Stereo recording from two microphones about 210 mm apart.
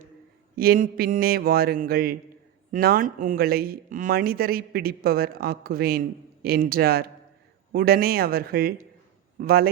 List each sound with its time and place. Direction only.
0.5 s speech: 45° right (ahead or behind)